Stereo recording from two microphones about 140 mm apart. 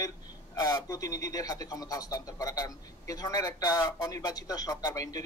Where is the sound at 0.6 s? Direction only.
30° left (ahead or behind).